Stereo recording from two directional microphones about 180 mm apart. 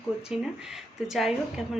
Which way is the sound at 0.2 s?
5° right (ahead or behind).